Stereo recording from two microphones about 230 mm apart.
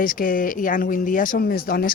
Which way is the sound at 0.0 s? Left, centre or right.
Left.